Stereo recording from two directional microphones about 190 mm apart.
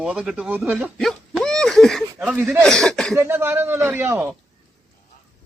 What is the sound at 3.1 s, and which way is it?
A man's voice, 10° right (ahead or behind).